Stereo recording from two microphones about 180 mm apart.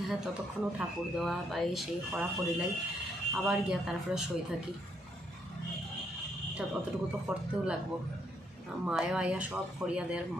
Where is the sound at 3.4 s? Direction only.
5° right (ahead or behind).